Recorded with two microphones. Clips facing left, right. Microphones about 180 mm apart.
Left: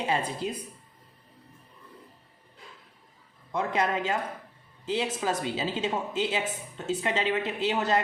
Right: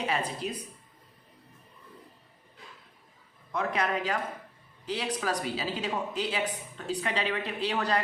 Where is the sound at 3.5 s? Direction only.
25° left (ahead or behind).